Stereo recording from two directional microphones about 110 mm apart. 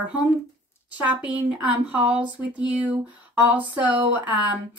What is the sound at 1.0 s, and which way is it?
Speech, 10° right (ahead or behind).